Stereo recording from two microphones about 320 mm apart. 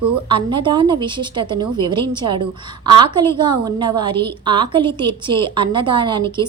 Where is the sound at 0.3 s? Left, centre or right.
Centre.